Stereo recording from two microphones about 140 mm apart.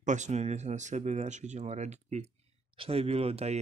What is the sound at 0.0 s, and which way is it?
Speech, 60° right (ahead or behind).